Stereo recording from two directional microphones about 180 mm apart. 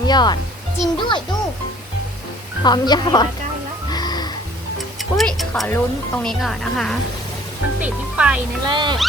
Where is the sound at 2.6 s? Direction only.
25° left (ahead or behind).